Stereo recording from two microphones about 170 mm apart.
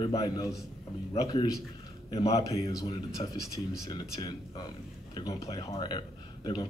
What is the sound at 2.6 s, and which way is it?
A man's voice, 20° left (ahead or behind).